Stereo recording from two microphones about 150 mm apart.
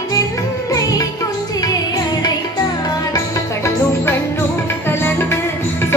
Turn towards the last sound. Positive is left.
turn(degrees=15)  # may be behind; listen again after turning